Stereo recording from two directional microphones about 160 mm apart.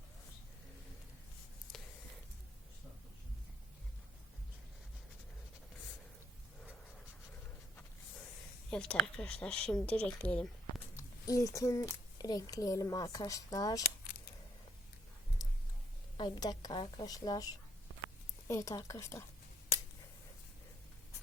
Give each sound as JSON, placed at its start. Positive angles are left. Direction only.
{"t": 8.7, "sound": "speech", "side_deg": 5}
{"t": 10.9, "sound": "speech", "side_deg": 20}
{"t": 15.4, "sound": "a sound", "side_deg": 25}
{"t": 16.1, "sound": "a woman's voice", "side_deg": 25}
{"t": 18.4, "sound": "a woman's voice", "side_deg": 20}